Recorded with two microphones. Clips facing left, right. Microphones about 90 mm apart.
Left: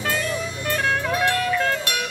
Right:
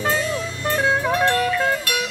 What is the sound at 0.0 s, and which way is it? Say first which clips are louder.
Music: right 3 dB; 20° right (ahead or behind).